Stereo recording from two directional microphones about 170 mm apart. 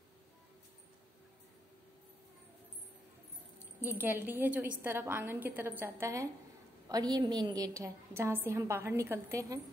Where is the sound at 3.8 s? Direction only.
10° right (ahead or behind).